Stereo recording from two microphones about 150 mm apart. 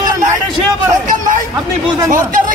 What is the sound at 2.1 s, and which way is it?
Speech, 65° right (ahead or behind).